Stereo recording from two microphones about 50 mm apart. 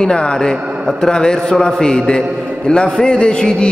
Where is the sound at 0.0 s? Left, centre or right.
Centre.